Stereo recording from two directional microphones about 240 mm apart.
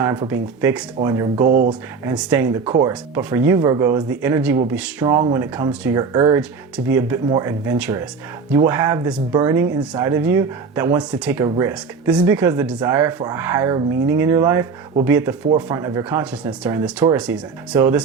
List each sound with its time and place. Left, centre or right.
0.0 s speech: centre
1.5 s speech: right
2.0 s speech: centre
2.6 s speech: right
2.9 s speech: centre